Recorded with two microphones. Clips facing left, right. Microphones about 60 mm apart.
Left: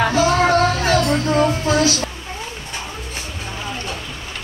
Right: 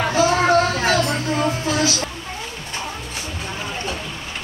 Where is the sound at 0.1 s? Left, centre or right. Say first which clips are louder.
Left 1 dB; centre.